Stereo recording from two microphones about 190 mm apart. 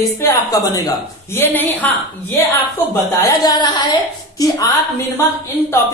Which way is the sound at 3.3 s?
20° left (ahead or behind).